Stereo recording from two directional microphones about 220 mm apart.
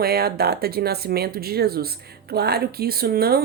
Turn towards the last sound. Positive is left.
turn(degrees=-45)  # may be behind; listen again after turning